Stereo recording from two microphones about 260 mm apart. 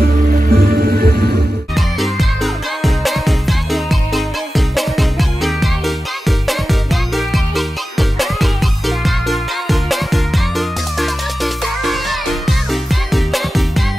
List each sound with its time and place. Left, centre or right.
0.5 s music: right
1.8 s music: centre